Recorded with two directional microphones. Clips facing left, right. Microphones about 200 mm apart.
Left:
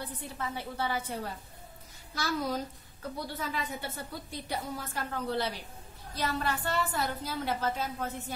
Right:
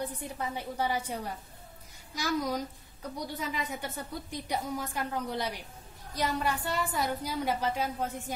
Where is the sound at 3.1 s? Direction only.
15° right (ahead or behind).